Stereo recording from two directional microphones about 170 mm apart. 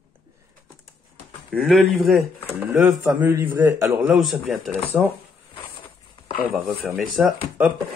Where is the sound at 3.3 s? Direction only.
15° right (ahead or behind).